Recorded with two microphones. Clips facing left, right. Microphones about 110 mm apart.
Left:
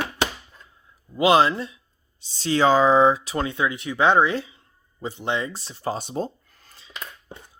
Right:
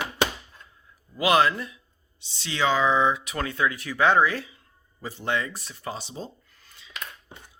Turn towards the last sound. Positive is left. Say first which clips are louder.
# left 2 dB
turn(degrees=40)  # may be behind; listen again after turning